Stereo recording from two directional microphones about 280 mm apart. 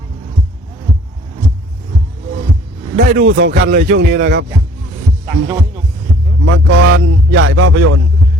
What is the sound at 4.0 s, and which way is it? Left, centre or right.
Speech, right.